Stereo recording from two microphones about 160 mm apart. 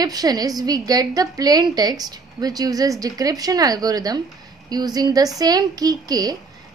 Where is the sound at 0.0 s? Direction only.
25° right (ahead or behind).